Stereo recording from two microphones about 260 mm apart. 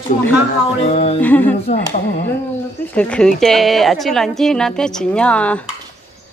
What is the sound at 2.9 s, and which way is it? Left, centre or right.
A woman's voice, centre.